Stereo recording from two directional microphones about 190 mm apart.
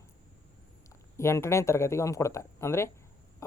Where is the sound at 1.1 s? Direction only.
15° left (ahead or behind).